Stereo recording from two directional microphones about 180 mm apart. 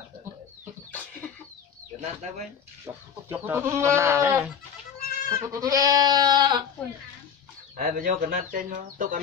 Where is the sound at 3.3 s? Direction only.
10° right (ahead or behind).